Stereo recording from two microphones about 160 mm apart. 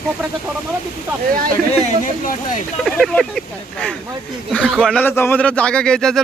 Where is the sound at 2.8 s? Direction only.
Centre (ahead or behind).